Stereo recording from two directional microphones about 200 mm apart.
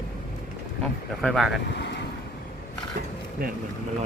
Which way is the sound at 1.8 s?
60° left (ahead or behind).